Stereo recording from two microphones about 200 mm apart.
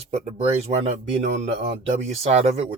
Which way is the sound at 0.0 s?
30° right (ahead or behind).